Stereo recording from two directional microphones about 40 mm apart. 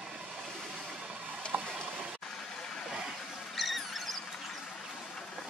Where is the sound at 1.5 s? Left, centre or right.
Right.